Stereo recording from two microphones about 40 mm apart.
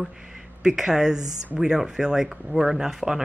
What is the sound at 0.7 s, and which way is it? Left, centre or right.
Speech, centre.